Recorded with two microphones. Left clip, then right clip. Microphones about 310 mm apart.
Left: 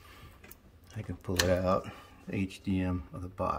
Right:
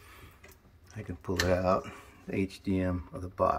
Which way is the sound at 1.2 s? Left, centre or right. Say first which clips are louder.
Right 1 dB; centre.